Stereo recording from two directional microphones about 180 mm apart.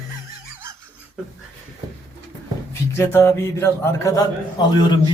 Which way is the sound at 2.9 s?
15° left (ahead or behind).